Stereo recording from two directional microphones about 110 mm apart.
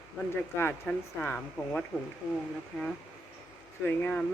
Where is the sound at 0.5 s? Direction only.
20° left (ahead or behind).